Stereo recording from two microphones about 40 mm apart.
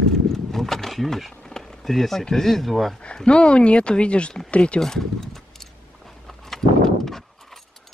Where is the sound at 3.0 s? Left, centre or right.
Left.